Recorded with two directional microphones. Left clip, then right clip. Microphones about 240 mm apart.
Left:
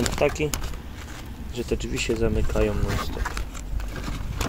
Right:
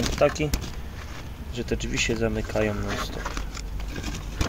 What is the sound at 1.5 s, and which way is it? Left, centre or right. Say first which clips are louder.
Speech: left 1 dB; centre.